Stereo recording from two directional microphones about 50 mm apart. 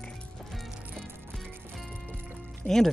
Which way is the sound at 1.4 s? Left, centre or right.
Centre.